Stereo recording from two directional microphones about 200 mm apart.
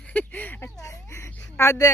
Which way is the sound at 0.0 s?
5° left (ahead or behind).